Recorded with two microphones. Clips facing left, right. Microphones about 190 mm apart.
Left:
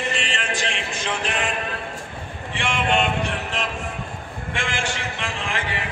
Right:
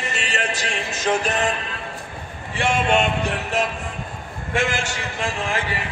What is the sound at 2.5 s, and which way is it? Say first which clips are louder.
Speech: right 3 dB; 45° right (ahead or behind).